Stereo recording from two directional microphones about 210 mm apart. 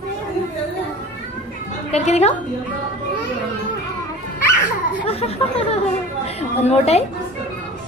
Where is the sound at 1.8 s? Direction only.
30° left (ahead or behind).